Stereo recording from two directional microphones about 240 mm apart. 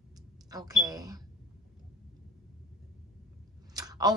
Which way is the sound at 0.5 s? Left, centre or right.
Centre.